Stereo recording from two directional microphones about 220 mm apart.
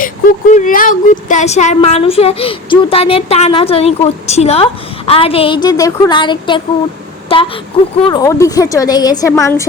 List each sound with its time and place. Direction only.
0.0 s a woman's voice: 35° left (ahead or behind); by 9.6 s 15° left (ahead or behind)